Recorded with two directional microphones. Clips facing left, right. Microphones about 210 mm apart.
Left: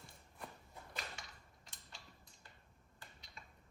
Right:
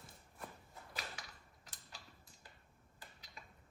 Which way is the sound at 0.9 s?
Centre (ahead or behind).